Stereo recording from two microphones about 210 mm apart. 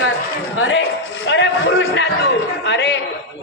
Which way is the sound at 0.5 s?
70° left (ahead or behind).